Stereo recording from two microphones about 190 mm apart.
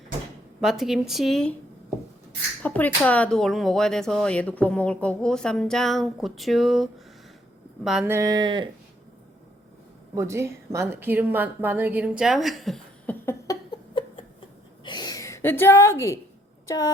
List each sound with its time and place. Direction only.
0.6 s speech: centre (ahead or behind)
2.6 s speech: 10° left (ahead or behind); by 8.7 s 25° right (ahead or behind)
10.2 s a woman's voice: 15° right (ahead or behind); by 13.1 s centre (ahead or behind)
13.2 s a sound: 20° left (ahead or behind)
16.6 s speech: 15° left (ahead or behind)